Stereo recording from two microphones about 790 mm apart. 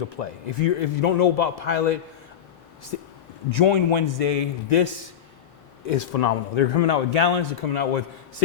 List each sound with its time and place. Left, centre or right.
0.2 s a man's voice: left
3.5 s a man's voice: left